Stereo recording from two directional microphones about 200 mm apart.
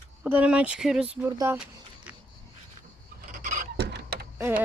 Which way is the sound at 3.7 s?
55° right (ahead or behind).